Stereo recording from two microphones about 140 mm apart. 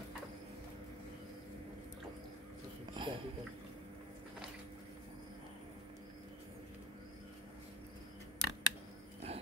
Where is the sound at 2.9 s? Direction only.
35° right (ahead or behind).